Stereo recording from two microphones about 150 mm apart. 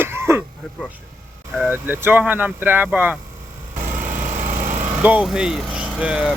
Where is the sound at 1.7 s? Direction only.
15° right (ahead or behind).